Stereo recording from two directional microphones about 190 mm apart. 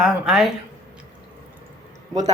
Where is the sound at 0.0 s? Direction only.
5° right (ahead or behind).